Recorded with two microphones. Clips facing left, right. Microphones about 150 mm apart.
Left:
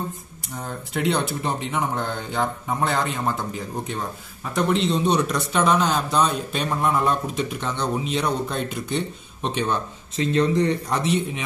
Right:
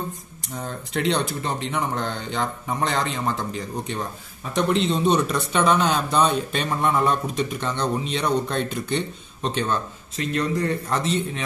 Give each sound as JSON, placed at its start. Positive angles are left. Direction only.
{"t": 0.9, "sound": "speech", "side_deg": 5}
{"t": 10.1, "sound": "speech", "side_deg": 25}